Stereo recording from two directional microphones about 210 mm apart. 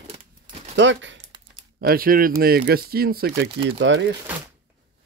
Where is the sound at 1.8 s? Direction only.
45° right (ahead or behind).